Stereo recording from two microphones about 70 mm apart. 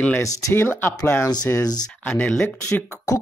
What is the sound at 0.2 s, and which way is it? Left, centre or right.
Speech, left.